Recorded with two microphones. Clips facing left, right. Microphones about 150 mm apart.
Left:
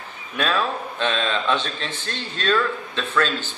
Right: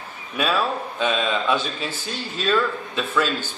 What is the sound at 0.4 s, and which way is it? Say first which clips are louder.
A man's voice: right 1 dB; 5° right (ahead or behind).